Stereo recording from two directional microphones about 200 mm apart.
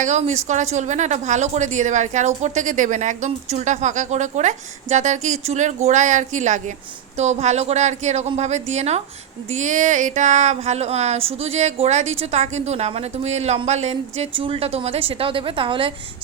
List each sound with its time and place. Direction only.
0.0 s speech: 35° right (ahead or behind)